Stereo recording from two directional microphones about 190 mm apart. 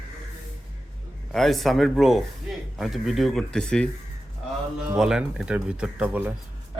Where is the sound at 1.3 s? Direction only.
Centre (ahead or behind).